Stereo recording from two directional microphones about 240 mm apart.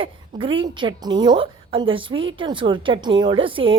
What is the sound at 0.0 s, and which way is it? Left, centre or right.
A woman's voice, right.